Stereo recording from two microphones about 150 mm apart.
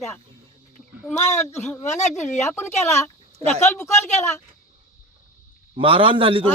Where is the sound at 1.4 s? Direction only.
15° left (ahead or behind).